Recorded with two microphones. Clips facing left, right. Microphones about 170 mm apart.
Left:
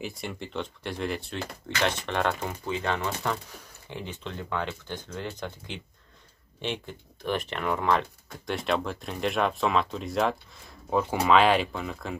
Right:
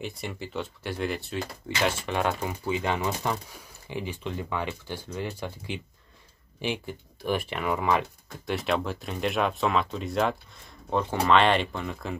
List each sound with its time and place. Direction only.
0.0 s speech: centre (ahead or behind)